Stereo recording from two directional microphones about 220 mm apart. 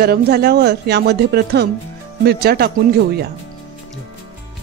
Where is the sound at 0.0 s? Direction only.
45° right (ahead or behind).